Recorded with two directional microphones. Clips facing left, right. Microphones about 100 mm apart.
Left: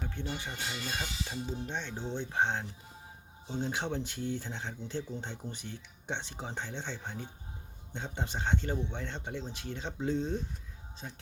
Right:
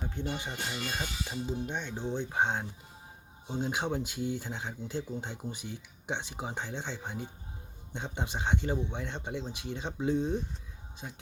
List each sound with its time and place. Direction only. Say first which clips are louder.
0.0 s speech: right 2 dB; 15° right (ahead or behind)